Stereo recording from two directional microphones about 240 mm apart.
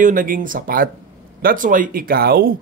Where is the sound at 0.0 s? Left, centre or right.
Right.